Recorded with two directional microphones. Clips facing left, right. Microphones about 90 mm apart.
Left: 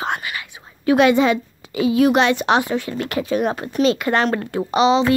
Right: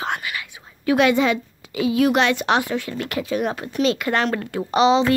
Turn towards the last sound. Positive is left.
turn(degrees=5)  # may be behind; listen again after turning